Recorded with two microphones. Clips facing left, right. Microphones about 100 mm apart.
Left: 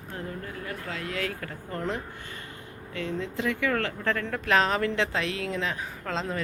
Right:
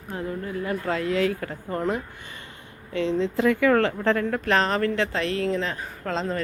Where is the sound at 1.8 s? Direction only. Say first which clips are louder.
Right 5 dB; 10° right (ahead or behind).